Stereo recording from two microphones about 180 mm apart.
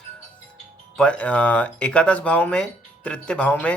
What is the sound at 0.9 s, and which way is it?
Speech, 5° left (ahead or behind).